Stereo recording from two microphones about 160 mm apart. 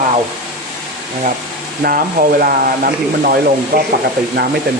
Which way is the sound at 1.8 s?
65° right (ahead or behind).